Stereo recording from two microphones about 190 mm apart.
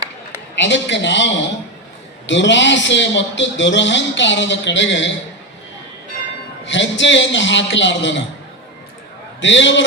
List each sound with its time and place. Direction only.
0.6 s a man's voice: 70° left (ahead or behind)
6.7 s a man's voice: 75° left (ahead or behind)
9.4 s a man's voice: 75° left (ahead or behind)